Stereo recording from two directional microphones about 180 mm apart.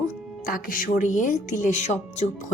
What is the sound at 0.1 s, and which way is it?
A woman's voice, 50° left (ahead or behind).